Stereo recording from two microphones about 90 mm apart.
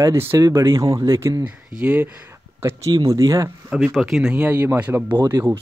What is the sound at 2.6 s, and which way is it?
Speech, 30° right (ahead or behind).